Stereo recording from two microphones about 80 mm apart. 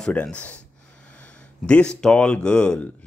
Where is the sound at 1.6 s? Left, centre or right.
Centre.